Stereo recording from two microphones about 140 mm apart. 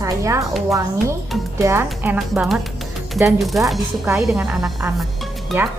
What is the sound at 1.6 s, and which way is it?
Speech, 15° right (ahead or behind).